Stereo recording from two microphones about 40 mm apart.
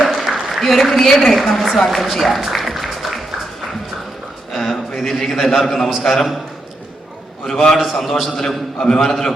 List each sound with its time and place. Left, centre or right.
0.0 s a sound: centre
0.6 s a woman's voice: centre
1.9 s music: centre
4.5 s a man's voice: centre
7.4 s a man's voice: centre
7.8 s a woman's voice: centre
8.4 s a man's voice: centre